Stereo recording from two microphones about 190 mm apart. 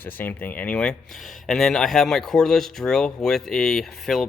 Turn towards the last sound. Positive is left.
turn(degrees=0)  # may be behind; listen again after turning